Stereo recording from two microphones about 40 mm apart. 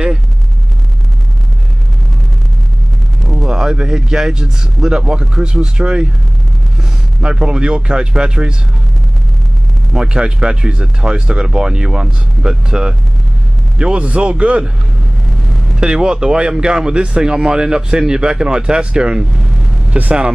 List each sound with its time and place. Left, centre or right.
3.4 s speech: centre
9.9 s speech: right
13.9 s speech: right
15.7 s speech: centre